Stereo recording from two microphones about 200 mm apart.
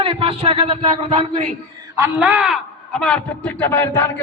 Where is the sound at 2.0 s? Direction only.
10° right (ahead or behind); by 4.1 s 10° left (ahead or behind).